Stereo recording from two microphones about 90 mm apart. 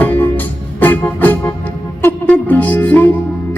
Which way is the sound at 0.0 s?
20° left (ahead or behind).